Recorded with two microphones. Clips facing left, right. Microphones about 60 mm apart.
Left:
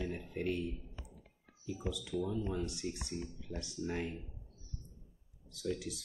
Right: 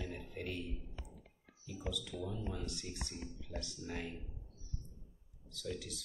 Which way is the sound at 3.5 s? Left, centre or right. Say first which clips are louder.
Left 5 dB; left.